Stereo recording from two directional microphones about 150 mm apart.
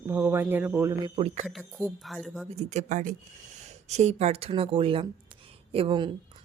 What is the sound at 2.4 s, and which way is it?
Speech, 45° right (ahead or behind).